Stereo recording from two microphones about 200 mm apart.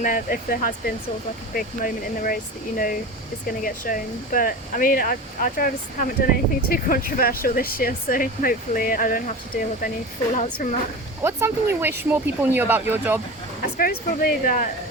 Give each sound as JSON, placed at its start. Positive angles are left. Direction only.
{"t": 0.0, "sound": "a woman's voice", "side_deg": 40}
{"t": 11.2, "sound": "speech", "side_deg": -15}
{"t": 13.7, "sound": "speech", "side_deg": 45}